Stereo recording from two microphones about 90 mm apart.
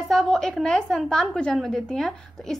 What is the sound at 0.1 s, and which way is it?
A woman's voice, 5° left (ahead or behind).